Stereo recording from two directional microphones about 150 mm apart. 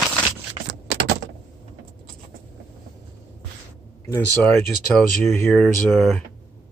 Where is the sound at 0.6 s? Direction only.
45° right (ahead or behind).